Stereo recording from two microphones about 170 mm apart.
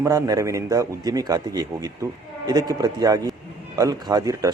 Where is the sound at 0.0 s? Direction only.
20° right (ahead or behind).